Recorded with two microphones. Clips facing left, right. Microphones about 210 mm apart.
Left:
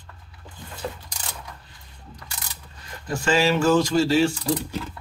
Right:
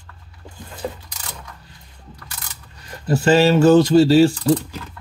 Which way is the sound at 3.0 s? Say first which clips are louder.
Right 7 dB; 35° right (ahead or behind).